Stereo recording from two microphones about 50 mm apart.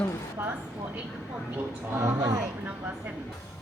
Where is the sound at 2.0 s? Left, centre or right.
Right.